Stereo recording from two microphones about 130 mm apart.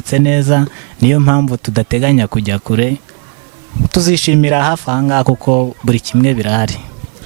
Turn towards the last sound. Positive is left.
turn(degrees=-15)  # may be behind; listen again after turning